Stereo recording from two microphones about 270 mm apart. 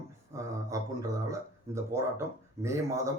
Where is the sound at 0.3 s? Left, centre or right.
Centre.